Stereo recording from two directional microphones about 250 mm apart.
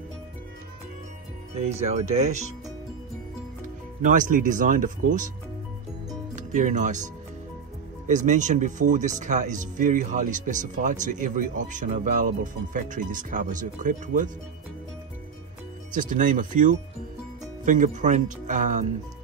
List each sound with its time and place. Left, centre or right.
1.5 s speech: right
3.6 s speech: right
6.3 s speech: right
8.1 s speech: right
15.9 s speech: right